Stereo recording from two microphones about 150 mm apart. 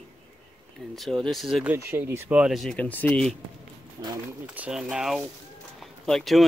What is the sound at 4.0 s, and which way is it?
Speech, 25° right (ahead or behind).